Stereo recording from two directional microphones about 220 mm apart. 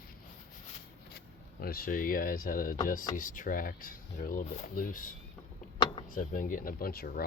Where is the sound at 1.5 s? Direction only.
40° left (ahead or behind).